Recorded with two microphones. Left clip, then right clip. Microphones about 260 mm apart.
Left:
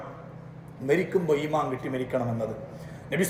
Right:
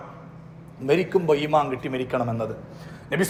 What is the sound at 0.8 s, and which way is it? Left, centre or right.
A man's voice, centre.